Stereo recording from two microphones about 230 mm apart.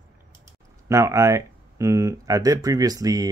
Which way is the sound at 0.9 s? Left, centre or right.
Centre.